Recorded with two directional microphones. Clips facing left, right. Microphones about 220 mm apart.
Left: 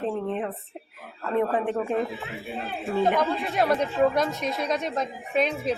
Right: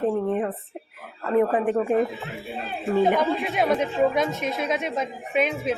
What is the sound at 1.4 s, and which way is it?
Speech, 5° right (ahead or behind).